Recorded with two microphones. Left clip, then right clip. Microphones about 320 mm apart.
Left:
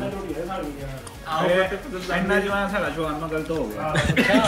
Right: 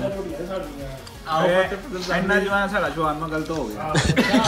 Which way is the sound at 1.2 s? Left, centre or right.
Right.